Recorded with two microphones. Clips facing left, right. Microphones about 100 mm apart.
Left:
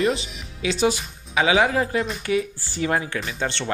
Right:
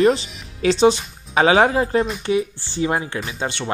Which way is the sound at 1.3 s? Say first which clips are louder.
Right 4 dB; 40° right (ahead or behind).